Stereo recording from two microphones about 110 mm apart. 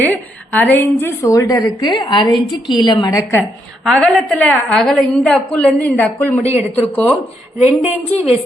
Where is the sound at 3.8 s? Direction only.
5° left (ahead or behind).